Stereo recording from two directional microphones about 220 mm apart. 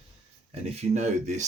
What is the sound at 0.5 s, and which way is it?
Speech, 30° right (ahead or behind).